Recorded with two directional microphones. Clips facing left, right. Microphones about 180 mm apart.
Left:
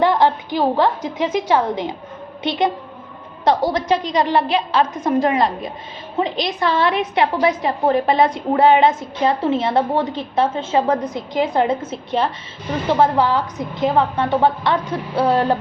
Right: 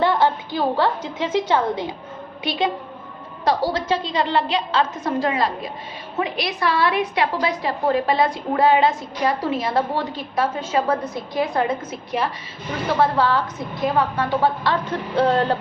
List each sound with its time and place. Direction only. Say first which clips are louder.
0.0 s a woman's voice: left 3 dB; 15° left (ahead or behind)